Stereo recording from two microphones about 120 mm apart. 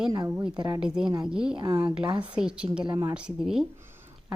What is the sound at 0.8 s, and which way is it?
A woman's voice, 5° right (ahead or behind).